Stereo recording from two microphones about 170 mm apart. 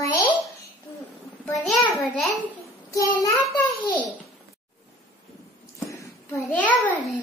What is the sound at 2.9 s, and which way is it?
Speech, 20° left (ahead or behind).